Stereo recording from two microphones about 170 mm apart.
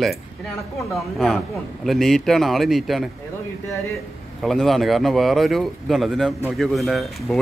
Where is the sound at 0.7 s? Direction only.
Centre (ahead or behind).